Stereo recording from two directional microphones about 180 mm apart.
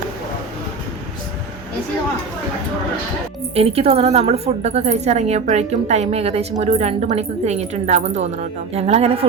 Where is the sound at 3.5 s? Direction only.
35° right (ahead or behind).